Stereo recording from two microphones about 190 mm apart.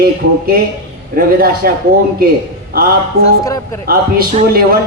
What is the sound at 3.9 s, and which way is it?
Speech, 50° right (ahead or behind).